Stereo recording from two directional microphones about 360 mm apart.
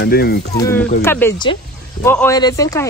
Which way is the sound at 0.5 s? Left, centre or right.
Centre.